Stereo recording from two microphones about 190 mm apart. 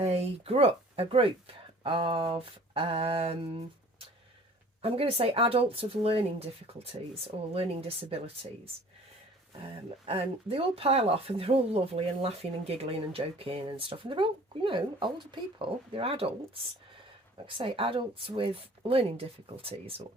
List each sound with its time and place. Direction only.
0.0 s speech: 35° right (ahead or behind)
4.8 s speech: 30° right (ahead or behind)
10.1 s speech: 30° right (ahead or behind)
17.4 s speech: 30° right (ahead or behind)